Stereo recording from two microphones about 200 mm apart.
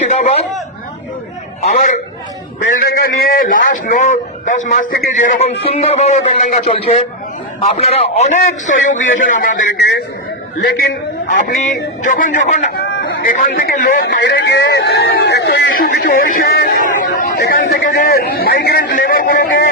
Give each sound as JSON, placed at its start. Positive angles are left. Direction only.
{"t": 0.0, "sound": "speech", "side_deg": 35}
{"t": 2.6, "sound": "a man's voice", "side_deg": 50}
{"t": 10.6, "sound": "a man's voice", "side_deg": 50}